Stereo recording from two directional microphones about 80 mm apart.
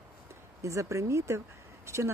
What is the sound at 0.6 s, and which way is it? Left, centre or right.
Speech, right.